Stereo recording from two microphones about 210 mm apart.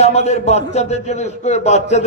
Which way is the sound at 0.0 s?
30° left (ahead or behind).